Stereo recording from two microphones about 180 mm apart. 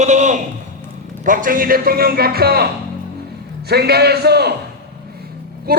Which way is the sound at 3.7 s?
60° right (ahead or behind).